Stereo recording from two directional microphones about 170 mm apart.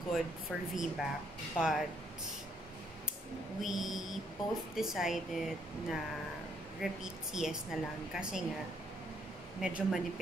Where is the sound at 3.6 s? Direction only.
Centre (ahead or behind).